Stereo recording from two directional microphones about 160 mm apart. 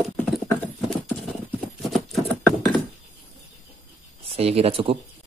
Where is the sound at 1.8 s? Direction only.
Centre (ahead or behind).